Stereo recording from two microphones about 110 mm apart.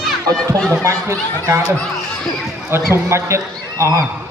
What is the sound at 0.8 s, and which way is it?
Speech, 25° right (ahead or behind).